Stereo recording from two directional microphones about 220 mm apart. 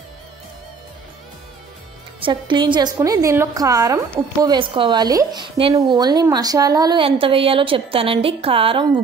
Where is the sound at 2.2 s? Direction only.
20° right (ahead or behind).